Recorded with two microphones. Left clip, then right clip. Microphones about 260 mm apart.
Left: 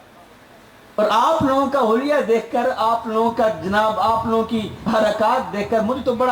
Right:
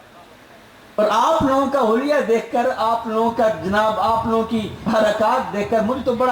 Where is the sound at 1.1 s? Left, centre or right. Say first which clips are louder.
Even; centre.